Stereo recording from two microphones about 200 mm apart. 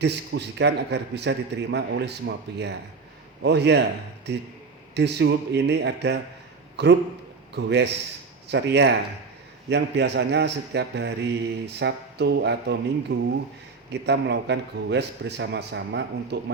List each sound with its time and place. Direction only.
0.0 s a man's voice: 55° right (ahead or behind)